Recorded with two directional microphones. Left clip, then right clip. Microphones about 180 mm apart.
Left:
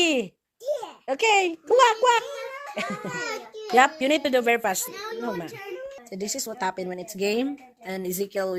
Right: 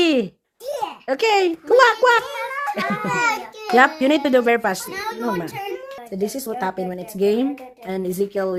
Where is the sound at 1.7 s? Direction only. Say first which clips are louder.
Right 4 dB; 5° right (ahead or behind).